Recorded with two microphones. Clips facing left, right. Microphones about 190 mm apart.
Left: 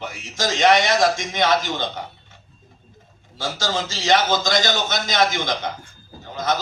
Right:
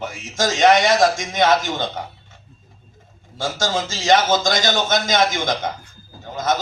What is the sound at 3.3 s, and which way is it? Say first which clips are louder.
A man's voice: right 3 dB; 50° right (ahead or behind).